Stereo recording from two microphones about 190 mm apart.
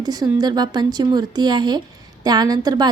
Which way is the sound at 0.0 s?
20° right (ahead or behind).